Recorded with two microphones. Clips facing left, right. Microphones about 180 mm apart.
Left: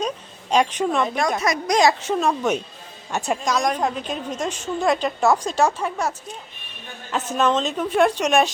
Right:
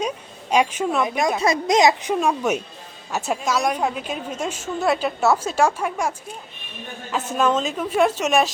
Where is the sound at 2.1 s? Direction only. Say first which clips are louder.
Even; 10° right (ahead or behind).